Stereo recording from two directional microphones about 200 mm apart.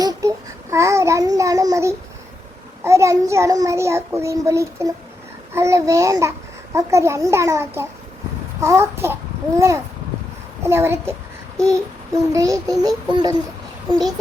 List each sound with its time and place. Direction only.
0.0 s babbling: 15° right (ahead or behind)
2.8 s a child's voice: 15° right (ahead or behind)
11.5 s child singing: 15° right (ahead or behind)
12.3 s a child's voice: 15° right (ahead or behind)
12.8 s a sound: 20° right (ahead or behind)